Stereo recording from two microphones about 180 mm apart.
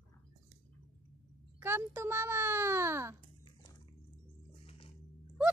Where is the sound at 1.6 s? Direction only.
15° right (ahead or behind).